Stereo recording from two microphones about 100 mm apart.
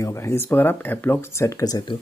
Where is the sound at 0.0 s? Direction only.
30° left (ahead or behind).